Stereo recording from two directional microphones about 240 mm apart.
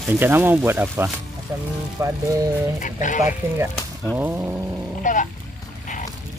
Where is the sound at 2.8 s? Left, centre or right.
Left.